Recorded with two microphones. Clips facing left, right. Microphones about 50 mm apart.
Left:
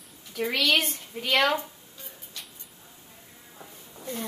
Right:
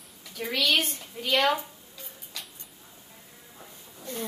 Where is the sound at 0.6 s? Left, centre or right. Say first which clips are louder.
Even; left.